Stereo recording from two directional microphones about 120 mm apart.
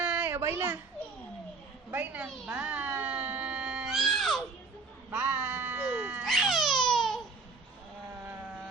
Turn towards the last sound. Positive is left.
turn(degrees=5)  # may be behind; listen again after turning